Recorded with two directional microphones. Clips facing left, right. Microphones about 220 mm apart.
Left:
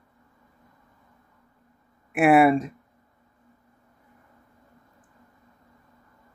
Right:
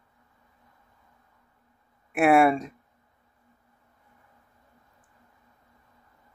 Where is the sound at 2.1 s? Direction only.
Centre (ahead or behind).